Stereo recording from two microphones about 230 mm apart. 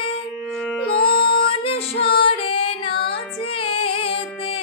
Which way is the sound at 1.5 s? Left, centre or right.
Left.